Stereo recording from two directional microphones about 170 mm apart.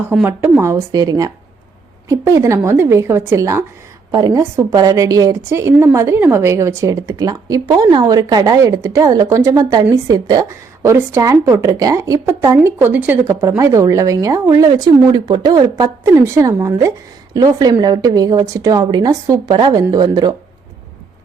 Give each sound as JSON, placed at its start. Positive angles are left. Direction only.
{"t": 0.0, "sound": "a woman's voice", "side_deg": -10}